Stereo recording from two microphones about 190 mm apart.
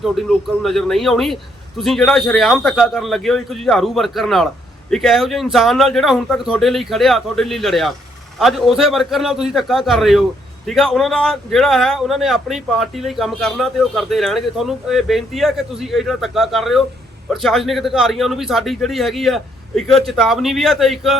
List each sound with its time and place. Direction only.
0.0 s speech: centre (ahead or behind)